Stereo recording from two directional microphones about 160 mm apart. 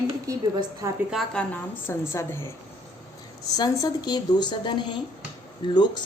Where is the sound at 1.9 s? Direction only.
15° left (ahead or behind).